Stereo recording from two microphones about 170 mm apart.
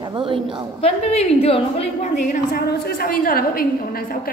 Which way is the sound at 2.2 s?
50° left (ahead or behind).